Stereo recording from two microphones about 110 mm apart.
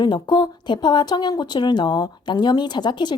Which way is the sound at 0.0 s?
40° left (ahead or behind).